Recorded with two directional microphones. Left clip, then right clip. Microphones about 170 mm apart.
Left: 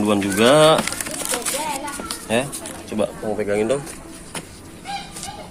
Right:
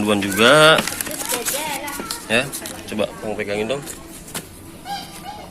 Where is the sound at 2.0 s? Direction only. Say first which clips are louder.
Right 2 dB; 10° left (ahead or behind).